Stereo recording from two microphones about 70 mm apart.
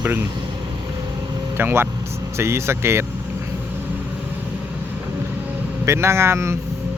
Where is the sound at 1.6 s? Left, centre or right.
Right.